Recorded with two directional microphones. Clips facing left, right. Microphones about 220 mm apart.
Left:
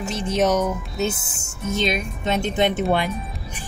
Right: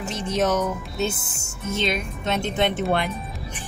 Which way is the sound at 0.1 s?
15° left (ahead or behind).